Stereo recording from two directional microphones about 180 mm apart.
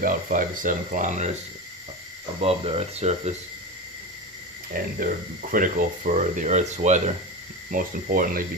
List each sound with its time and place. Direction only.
0.0 s speech: 50° right (ahead or behind)
2.4 s speech: 35° right (ahead or behind)
4.7 s speech: 50° right (ahead or behind)